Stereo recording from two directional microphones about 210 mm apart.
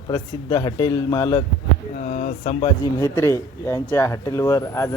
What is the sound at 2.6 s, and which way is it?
Speech, 15° left (ahead or behind).